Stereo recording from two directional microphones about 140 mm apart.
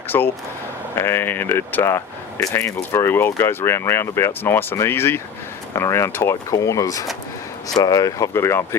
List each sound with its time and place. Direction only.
0.1 s speech: 15° left (ahead or behind)